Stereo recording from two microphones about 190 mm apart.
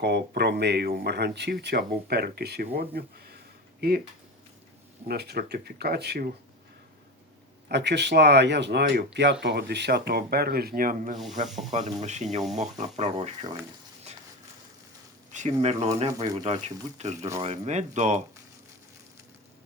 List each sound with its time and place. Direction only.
0.0 s speech: 60° right (ahead or behind)
5.0 s speech: 60° right (ahead or behind)
7.7 s speech: 60° right (ahead or behind); by 11.2 s 45° right (ahead or behind)
11.4 s speech: centre (ahead or behind)
11.7 s speech: 35° right (ahead or behind)
14.1 s a sound: 35° right (ahead or behind)
15.3 s speech: 35° right (ahead or behind)
16.0 s speech: 20° right (ahead or behind)
16.5 s speech: 35° right (ahead or behind)